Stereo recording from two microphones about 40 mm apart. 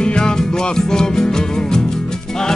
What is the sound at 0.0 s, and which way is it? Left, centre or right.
Music, left.